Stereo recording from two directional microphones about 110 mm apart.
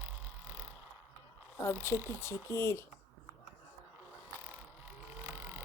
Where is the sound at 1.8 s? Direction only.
25° left (ahead or behind).